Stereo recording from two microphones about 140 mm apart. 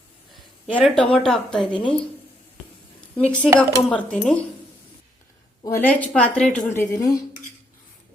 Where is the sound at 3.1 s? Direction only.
10° left (ahead or behind).